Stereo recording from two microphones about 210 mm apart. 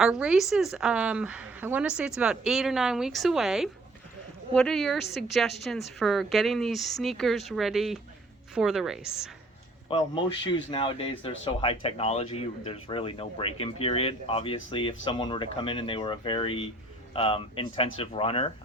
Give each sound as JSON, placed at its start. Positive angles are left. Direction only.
{"t": 0.0, "sound": "a woman's voice", "side_deg": -5}
{"t": 9.9, "sound": "speech", "side_deg": 25}